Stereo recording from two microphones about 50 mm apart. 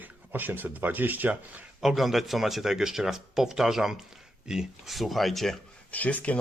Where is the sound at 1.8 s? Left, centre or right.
Centre.